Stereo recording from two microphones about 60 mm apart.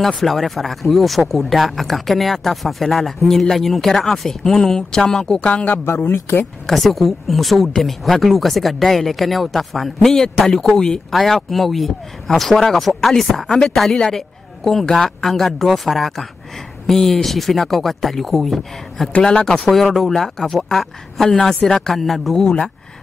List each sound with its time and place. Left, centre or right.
0.0 s speech: centre
5.5 s speech: left
5.9 s speech: left
6.6 s speech: centre
19.2 s speech: centre